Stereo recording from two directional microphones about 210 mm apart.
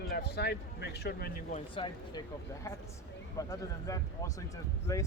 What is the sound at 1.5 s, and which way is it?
Speech, 25° left (ahead or behind).